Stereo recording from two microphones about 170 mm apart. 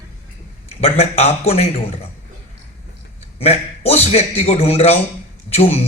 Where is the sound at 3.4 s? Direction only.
40° left (ahead or behind).